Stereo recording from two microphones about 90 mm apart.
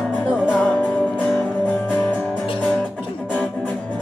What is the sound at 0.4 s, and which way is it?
Music, 20° left (ahead or behind).